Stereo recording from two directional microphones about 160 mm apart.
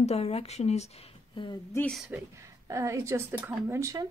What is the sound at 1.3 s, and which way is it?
Speech, 30° left (ahead or behind).